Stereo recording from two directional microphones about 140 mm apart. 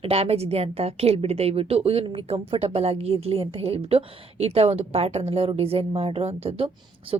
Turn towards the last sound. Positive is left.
turn(degrees=-40)  # may be behind; listen again after turning